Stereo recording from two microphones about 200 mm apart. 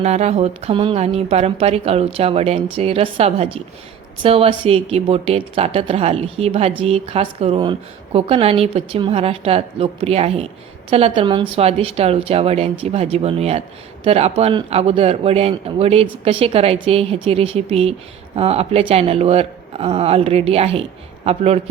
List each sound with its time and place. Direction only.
0.0 s a woman's voice: 35° right (ahead or behind)